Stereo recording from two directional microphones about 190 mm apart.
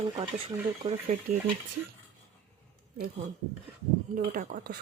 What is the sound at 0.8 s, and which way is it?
Speech, 35° right (ahead or behind).